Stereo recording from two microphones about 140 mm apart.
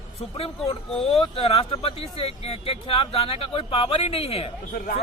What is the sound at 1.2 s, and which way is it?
Speech, 40° left (ahead or behind).